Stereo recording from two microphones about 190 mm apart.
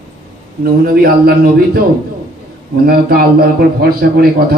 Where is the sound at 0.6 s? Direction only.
50° right (ahead or behind).